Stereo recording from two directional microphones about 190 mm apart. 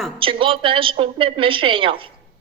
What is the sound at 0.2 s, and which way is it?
A woman's voice, 25° right (ahead or behind).